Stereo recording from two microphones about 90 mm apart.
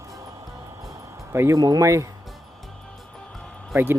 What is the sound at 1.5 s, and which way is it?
Speech, 45° right (ahead or behind).